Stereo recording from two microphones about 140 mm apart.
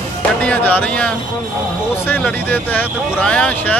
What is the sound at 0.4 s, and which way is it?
Speech, 10° left (ahead or behind).